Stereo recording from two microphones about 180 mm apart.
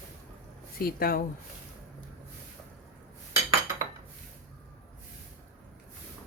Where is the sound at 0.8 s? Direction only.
55° left (ahead or behind).